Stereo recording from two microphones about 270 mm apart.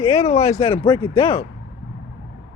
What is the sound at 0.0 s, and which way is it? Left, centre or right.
Speech, left.